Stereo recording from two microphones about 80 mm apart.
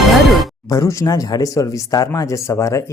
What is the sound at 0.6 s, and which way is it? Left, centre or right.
Speech, left.